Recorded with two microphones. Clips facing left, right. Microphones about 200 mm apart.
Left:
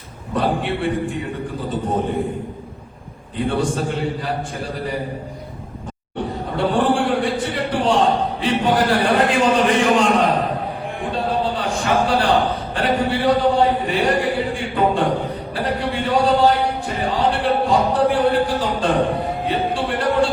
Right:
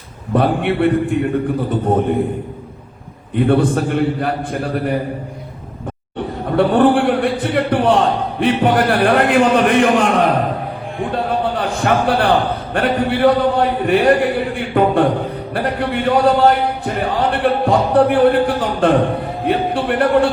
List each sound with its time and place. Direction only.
0.3 s a man's voice: 60° right (ahead or behind)
3.3 s a man's voice: 55° right (ahead or behind)
6.6 s a man's voice: 55° right (ahead or behind)